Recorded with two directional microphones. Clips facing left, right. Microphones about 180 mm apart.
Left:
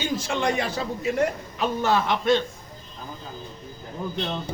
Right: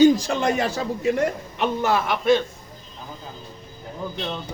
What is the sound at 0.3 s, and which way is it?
Speech, 45° right (ahead or behind).